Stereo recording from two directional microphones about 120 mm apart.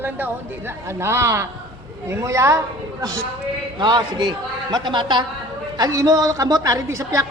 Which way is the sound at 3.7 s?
35° right (ahead or behind).